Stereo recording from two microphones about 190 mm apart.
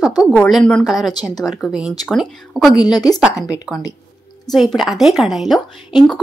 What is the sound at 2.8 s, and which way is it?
Speech, 20° left (ahead or behind).